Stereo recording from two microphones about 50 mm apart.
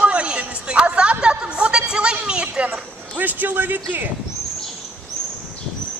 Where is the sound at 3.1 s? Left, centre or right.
Right.